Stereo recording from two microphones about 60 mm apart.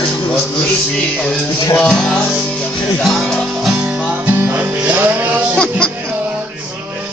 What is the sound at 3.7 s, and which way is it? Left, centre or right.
Music, right.